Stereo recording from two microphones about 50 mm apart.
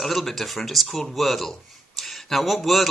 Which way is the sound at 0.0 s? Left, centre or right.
Centre.